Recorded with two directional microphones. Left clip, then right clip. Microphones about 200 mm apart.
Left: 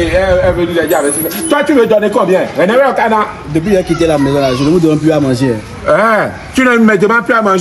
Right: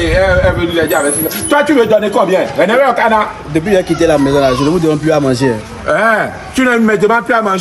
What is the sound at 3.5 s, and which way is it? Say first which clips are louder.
A man's voice: even; 20° right (ahead or behind).